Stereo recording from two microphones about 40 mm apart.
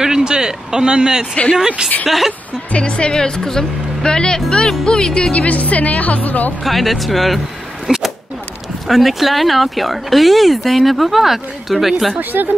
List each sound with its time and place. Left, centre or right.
0.2 s speech: centre
2.0 s speech: centre
2.7 s speech: left
5.3 s speech: left
6.6 s speech: centre
12.2 s a woman's voice: right